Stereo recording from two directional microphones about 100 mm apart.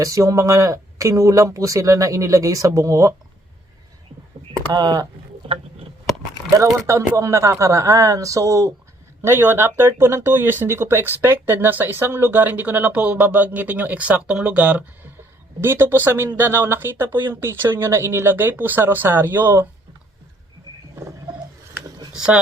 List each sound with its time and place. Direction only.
0.0 s speech: 35° right (ahead or behind)
4.7 s speech: 40° right (ahead or behind)
6.8 s speech: 30° right (ahead or behind)
20.9 s a sound: 35° right (ahead or behind)
22.1 s speech: 5° right (ahead or behind)